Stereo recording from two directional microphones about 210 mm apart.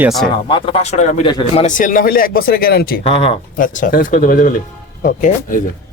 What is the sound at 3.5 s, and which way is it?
Speech, 40° left (ahead or behind).